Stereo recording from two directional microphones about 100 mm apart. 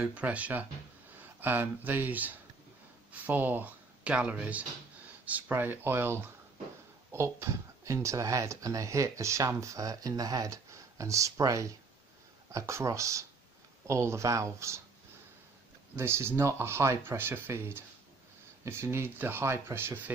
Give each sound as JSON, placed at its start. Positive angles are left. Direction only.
{"t": 0.0, "sound": "speech", "side_deg": -15}
{"t": 16.0, "sound": "speech", "side_deg": -25}